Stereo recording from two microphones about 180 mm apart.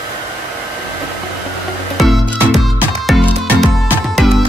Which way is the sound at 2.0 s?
Centre (ahead or behind).